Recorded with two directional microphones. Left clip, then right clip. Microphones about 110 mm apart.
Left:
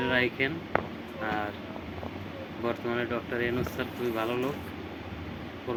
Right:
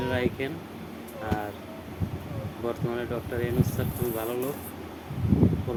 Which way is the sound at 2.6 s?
15° right (ahead or behind).